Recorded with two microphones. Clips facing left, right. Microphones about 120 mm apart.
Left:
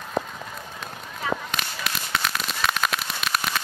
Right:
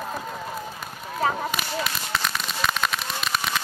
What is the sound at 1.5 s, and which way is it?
Firecracker, centre (ahead or behind).